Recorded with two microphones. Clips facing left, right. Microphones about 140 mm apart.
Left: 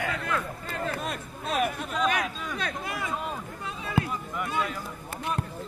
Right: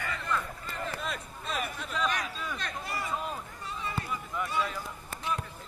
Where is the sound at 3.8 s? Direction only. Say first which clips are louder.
Left 8 dB; 65° left (ahead or behind).